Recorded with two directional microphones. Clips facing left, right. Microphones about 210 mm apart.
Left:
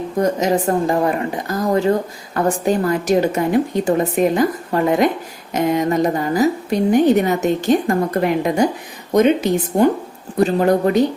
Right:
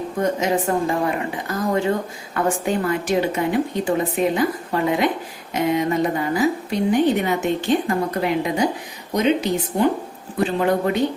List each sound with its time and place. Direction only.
0.2 s a woman's voice: 40° left (ahead or behind)